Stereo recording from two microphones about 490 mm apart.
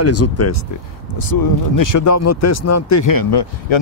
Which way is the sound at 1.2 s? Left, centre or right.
Left.